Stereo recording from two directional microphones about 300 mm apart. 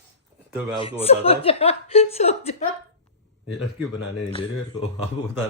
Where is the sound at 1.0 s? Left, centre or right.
Centre.